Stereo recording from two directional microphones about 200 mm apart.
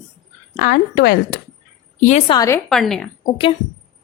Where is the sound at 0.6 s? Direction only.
50° left (ahead or behind).